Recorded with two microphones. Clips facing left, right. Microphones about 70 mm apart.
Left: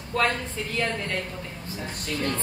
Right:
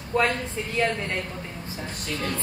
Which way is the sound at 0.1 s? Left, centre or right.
Centre.